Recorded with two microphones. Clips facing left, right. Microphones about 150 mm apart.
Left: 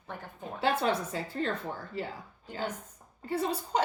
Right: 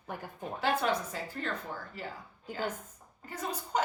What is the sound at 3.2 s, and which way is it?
Speech, 30° left (ahead or behind).